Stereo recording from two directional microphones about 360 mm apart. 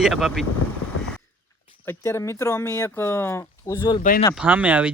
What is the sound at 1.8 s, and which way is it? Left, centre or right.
Speech, centre.